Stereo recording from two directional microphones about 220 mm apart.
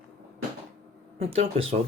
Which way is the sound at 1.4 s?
25° right (ahead or behind).